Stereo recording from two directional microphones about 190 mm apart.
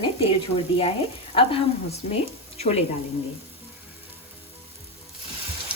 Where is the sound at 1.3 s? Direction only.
30° left (ahead or behind).